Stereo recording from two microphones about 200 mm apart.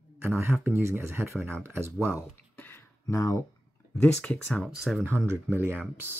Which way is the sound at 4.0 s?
5° left (ahead or behind).